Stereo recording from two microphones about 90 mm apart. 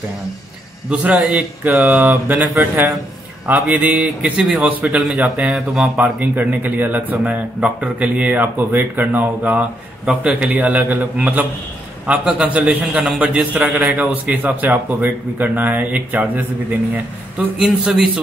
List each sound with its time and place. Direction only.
0.8 s a man's voice: 15° right (ahead or behind)
5.9 s a man's voice: 20° right (ahead or behind)
17.6 s a man's voice: 10° right (ahead or behind)